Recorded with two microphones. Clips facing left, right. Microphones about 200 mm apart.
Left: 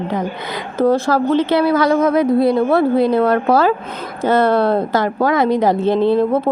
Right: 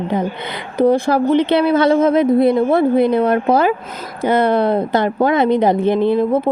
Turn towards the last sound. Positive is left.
turn(degrees=-15)  # may be behind; listen again after turning